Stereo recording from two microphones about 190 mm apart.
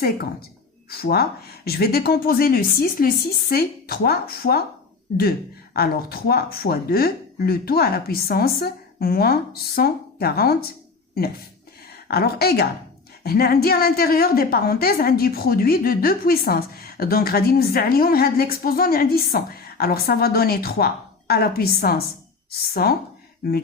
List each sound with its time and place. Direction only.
0.9 s a woman's voice: 55° left (ahead or behind)
5.7 s a woman's voice: 55° left (ahead or behind)
12.0 s a woman's voice: 55° left (ahead or behind)